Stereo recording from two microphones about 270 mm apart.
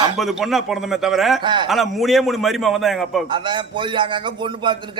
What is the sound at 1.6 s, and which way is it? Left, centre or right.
Speech, centre.